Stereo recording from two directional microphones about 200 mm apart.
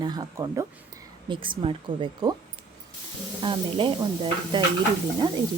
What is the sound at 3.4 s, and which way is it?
Stir, 25° right (ahead or behind).